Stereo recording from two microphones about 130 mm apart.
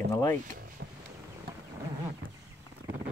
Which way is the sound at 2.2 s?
90° right.